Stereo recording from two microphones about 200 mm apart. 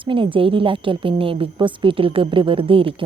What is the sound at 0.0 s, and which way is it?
A woman's voice, 25° right (ahead or behind).